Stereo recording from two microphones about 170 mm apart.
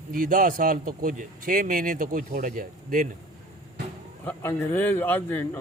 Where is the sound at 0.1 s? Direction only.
55° right (ahead or behind).